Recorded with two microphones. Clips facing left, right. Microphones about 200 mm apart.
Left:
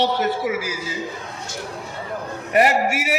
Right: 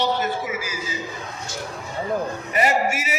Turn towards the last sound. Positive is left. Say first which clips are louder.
# left 2 dB
turn(degrees=65)  # may be behind; listen again after turning